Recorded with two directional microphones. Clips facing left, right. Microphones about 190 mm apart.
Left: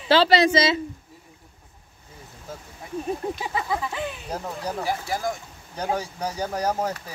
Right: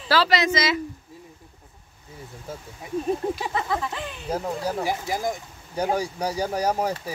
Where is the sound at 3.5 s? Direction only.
10° left (ahead or behind).